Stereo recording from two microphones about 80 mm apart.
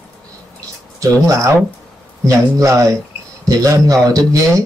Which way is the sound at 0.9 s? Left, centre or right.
Right.